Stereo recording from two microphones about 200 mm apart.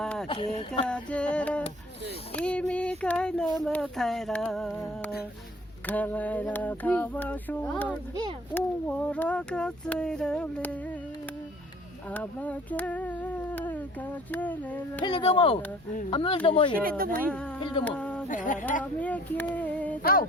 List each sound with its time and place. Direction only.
0.0 s a sound: 5° left (ahead or behind)
0.3 s speech: 25° left (ahead or behind)
0.9 s owl: 5° left (ahead or behind)
3.0 s speech: 5° left (ahead or behind)
5.8 s owl: 10° left (ahead or behind)
12.1 s cat: 5° left (ahead or behind)
14.3 s owl: 10° left (ahead or behind)
15.0 s speech: 30° left (ahead or behind)
17.8 s speech: 5° left (ahead or behind)
18.3 s speech: 40° left (ahead or behind)
18.8 s owl: 5° left (ahead or behind)
20.0 s a sound: 50° left (ahead or behind)